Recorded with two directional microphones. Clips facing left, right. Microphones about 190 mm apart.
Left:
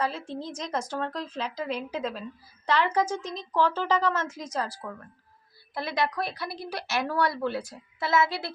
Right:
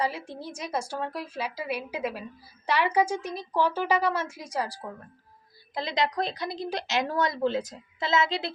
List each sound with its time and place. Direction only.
0.0 s a woman's voice: 10° right (ahead or behind)